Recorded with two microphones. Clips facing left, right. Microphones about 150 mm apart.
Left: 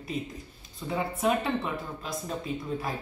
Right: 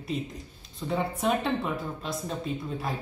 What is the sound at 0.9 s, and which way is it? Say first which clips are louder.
A woman's voice: even; centre (ahead or behind).